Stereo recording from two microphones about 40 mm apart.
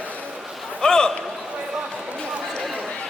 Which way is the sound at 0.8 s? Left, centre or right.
Centre.